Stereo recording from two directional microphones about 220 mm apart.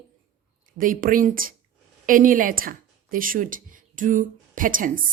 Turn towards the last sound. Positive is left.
turn(degrees=-40)  # may be behind; listen again after turning